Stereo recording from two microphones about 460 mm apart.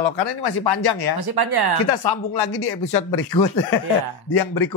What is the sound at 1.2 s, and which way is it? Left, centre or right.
Speech, right.